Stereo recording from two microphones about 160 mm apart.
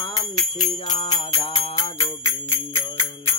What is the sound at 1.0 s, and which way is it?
Jingle bell, 40° left (ahead or behind).